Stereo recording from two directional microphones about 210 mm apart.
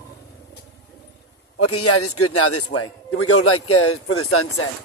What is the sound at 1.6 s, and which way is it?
A man's voice, 90° left.